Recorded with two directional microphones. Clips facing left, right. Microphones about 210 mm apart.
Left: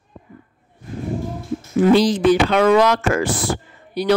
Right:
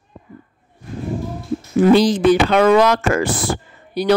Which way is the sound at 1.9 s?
50° right (ahead or behind).